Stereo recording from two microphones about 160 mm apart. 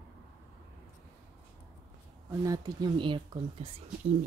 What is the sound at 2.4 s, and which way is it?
Speech, 25° right (ahead or behind).